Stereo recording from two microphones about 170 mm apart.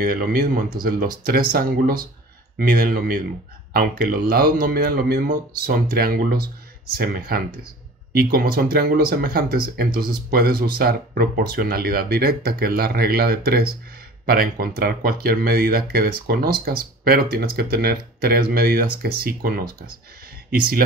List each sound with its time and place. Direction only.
0.0 s speech: 60° right (ahead or behind)